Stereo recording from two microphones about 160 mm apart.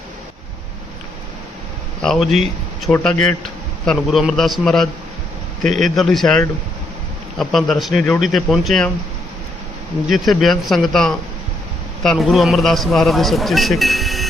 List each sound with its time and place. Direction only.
2.0 s speech: centre (ahead or behind)
5.6 s a man's voice: 50° right (ahead or behind)
6.0 s speech: centre (ahead or behind)
10.1 s speech: centre (ahead or behind)